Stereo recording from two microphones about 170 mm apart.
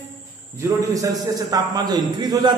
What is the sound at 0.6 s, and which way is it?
A man's voice, 20° right (ahead or behind).